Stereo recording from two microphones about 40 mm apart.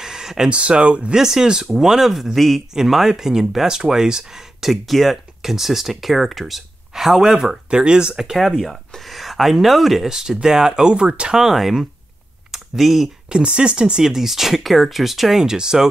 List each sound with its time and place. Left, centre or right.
0.0 s a sound: centre
0.5 s speech: right
1.1 s speech: centre
2.7 s speech: centre
8.2 s speech: centre
8.5 s speech: centre
10.0 s speech: centre
11.3 s speech: centre
12.4 s a sound: centre
13.3 s speech: right
14.0 s speech: centre
15.4 s speech: centre